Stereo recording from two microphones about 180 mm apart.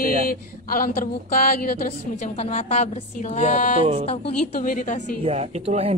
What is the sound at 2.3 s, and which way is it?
A woman's voice, 35° left (ahead or behind).